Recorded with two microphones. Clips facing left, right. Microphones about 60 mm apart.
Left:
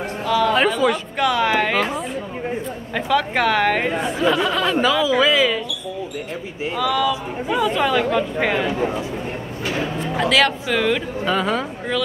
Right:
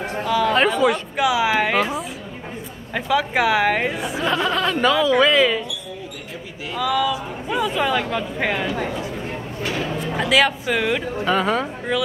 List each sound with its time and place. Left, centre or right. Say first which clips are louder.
0.2 s speech: left 1 dB; centre
6.8 s speech: even; centre
8.6 s speech: left 3 dB; left
9.9 s speech: even; centre